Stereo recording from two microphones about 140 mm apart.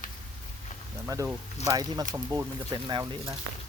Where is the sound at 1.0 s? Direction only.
20° right (ahead or behind).